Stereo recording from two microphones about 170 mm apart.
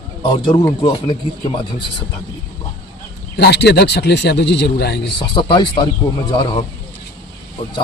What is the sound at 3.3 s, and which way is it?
A man's voice, 80° left.